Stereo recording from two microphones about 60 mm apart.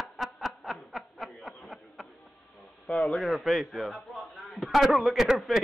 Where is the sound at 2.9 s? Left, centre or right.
Left.